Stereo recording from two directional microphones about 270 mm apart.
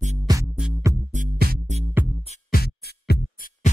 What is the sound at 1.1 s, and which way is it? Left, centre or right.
Music, right.